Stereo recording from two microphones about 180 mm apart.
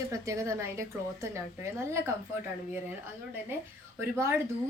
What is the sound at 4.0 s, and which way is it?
Speech, 15° right (ahead or behind).